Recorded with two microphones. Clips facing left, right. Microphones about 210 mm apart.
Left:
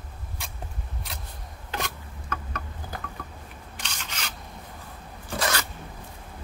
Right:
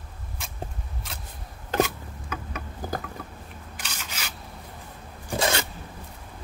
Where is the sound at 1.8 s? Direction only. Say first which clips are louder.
Right 13 dB; 10° right (ahead or behind).